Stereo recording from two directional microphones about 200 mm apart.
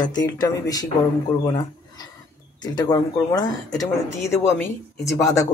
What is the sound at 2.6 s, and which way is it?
Speech, 20° left (ahead or behind).